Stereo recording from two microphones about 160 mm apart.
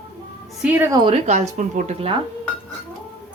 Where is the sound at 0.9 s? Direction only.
35° right (ahead or behind).